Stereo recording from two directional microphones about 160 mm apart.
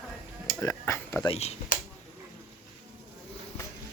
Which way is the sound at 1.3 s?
40° left (ahead or behind).